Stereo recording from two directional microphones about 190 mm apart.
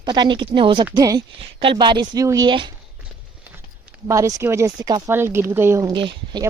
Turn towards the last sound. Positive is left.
turn(degrees=-25)  # may be behind; listen again after turning